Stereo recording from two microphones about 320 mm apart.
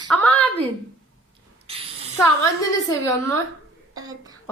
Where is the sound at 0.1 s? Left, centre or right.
Centre.